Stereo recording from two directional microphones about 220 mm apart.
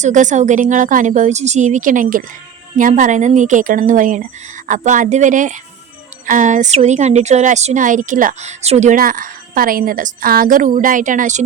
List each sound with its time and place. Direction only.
0.0 s speech: 35° right (ahead or behind)